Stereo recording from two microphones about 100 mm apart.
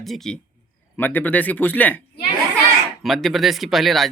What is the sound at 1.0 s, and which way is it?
Speech, 20° left (ahead or behind).